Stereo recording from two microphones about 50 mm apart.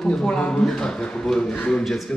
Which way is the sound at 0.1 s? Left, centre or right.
Centre.